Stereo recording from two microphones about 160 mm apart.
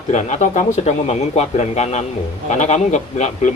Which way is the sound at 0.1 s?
45° left (ahead or behind).